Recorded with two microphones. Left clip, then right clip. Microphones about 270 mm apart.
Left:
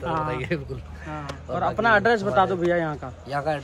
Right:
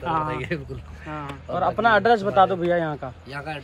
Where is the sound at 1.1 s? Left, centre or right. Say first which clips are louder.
Right 2 dB; right.